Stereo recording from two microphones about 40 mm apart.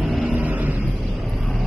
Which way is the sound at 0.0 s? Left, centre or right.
Centre.